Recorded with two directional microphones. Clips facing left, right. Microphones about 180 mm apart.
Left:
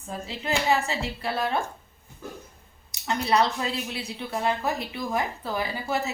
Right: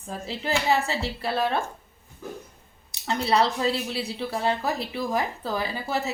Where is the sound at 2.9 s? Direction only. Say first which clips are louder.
Even; 30° right (ahead or behind).